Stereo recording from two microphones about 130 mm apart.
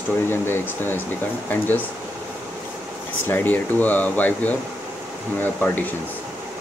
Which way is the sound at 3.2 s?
15° left (ahead or behind).